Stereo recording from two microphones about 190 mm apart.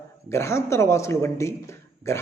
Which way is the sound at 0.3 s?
15° left (ahead or behind).